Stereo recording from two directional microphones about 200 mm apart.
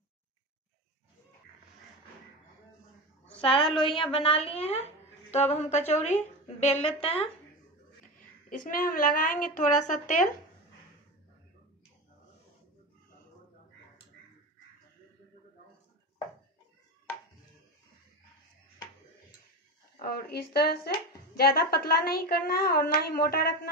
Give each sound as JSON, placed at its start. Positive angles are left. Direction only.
{"t": 3.3, "sound": "a woman's voice", "side_deg": 25}
{"t": 8.2, "sound": "speech", "side_deg": 40}
{"t": 20.0, "sound": "speech", "side_deg": 50}